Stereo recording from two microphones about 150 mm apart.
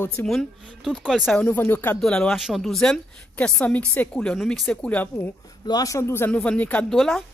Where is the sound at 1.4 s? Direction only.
10° left (ahead or behind).